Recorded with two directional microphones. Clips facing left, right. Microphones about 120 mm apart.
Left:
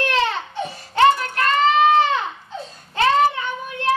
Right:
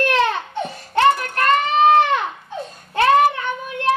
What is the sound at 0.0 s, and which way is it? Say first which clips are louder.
Baby cry: right 3 dB; 55° right (ahead or behind).